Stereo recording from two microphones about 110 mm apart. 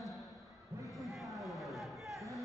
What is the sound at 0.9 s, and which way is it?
Chatter, centre (ahead or behind).